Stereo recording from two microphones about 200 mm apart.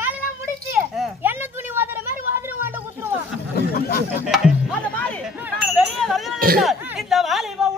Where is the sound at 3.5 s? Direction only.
50° left (ahead or behind).